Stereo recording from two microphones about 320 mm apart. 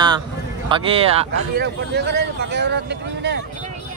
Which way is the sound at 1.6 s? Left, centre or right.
Right.